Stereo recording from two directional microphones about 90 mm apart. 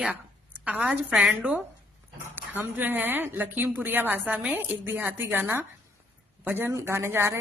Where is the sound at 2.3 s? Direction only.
20° right (ahead or behind).